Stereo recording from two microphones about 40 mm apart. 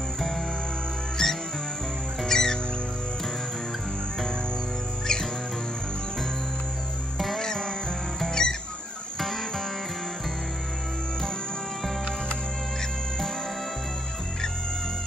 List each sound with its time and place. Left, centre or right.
1.2 s music: centre
5.0 s music: centre
7.2 s music: centre
7.4 s music: centre